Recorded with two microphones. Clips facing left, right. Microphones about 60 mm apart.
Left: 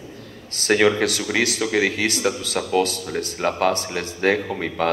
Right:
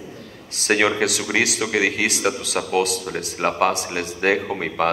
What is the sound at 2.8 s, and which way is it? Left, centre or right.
Speech, right.